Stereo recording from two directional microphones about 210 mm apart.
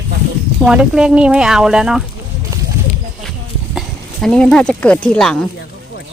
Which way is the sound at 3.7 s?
Centre (ahead or behind).